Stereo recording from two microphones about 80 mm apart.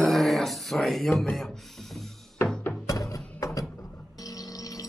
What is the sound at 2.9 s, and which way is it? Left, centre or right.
Music, left.